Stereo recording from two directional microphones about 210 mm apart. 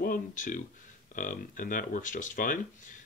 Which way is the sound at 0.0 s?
40° left (ahead or behind).